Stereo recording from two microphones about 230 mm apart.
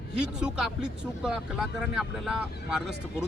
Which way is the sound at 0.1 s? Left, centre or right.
Centre.